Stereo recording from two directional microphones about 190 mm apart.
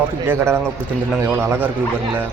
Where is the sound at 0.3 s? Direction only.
10° right (ahead or behind).